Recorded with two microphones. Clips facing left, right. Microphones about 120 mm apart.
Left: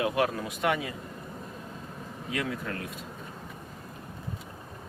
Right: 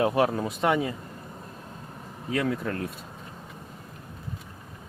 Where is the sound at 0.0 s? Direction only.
35° right (ahead or behind).